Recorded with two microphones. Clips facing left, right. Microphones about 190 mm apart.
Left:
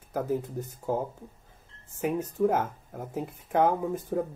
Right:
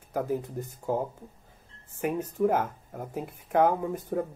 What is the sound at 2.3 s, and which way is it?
Speech, centre (ahead or behind).